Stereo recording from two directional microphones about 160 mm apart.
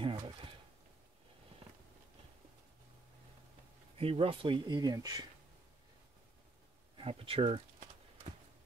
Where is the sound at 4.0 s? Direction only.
35° right (ahead or behind).